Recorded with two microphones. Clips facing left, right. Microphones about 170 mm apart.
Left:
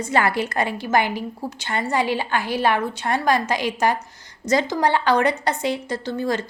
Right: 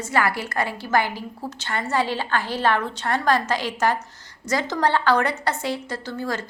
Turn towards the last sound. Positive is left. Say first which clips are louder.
# left 4 dB
turn(degrees=20)  # may be behind; listen again after turning